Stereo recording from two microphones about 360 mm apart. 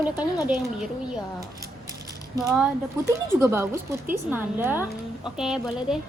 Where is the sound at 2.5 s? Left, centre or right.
Centre.